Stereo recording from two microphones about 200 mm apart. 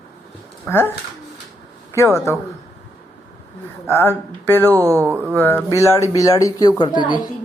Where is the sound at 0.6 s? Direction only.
10° left (ahead or behind).